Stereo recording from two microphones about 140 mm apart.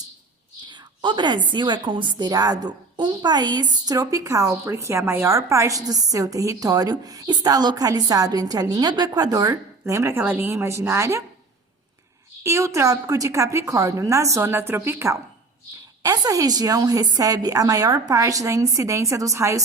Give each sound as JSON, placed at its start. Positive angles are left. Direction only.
{"t": 0.7, "sound": "a woman's voice", "side_deg": -35}
{"t": 12.4, "sound": "a woman's voice", "side_deg": -20}